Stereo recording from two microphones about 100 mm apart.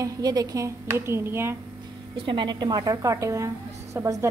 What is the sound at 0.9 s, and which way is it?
Speech, 25° right (ahead or behind).